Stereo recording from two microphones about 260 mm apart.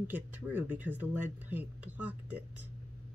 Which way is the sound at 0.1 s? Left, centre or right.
Centre.